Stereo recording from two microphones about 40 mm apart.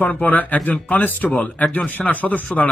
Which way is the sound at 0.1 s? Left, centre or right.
Left.